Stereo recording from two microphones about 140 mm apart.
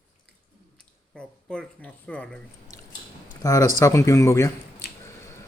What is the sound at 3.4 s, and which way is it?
Speech, 20° left (ahead or behind).